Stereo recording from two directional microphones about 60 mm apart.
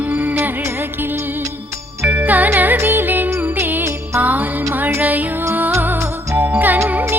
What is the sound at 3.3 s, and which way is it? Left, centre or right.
Music, right.